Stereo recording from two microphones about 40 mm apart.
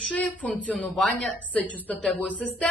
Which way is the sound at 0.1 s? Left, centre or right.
Left.